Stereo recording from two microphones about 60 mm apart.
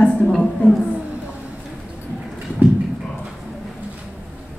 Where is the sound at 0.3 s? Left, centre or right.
Centre.